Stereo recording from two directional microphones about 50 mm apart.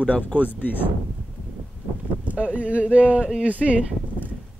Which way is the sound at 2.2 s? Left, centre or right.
Right.